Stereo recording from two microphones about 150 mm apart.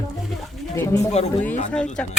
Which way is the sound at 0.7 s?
20° left (ahead or behind).